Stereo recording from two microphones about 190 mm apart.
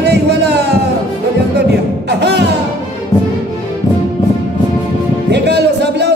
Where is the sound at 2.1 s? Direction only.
60° right (ahead or behind).